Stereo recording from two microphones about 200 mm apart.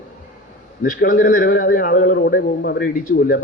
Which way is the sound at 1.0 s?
45° left (ahead or behind).